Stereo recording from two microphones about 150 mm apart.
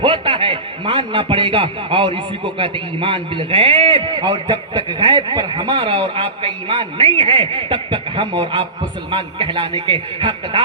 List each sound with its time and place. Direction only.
0.0 s a man's voice: 35° right (ahead or behind)